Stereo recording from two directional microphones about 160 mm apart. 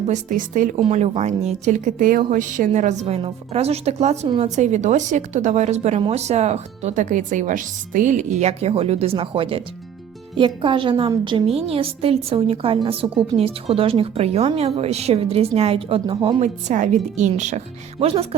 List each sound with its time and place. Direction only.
0.1 s speech: 55° right (ahead or behind)
0.9 s a woman's voice: 40° right (ahead or behind)
16.4 s a woman's voice: 50° right (ahead or behind)